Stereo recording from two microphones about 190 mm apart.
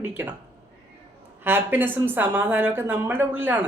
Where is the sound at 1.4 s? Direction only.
10° right (ahead or behind).